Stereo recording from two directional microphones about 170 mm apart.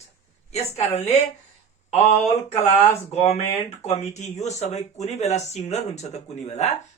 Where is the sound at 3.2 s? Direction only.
40° left (ahead or behind).